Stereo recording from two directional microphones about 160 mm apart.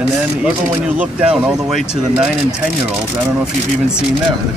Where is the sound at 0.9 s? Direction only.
5° right (ahead or behind).